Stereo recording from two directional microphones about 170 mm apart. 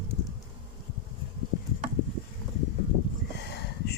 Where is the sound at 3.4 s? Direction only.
80° left.